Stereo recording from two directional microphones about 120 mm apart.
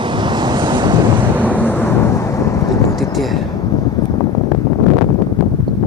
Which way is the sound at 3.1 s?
Centre (ahead or behind).